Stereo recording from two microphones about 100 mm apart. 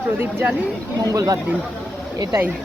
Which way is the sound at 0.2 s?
15° right (ahead or behind).